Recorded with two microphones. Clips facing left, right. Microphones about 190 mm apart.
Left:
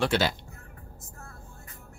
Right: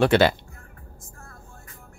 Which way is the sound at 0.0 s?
60° right (ahead or behind).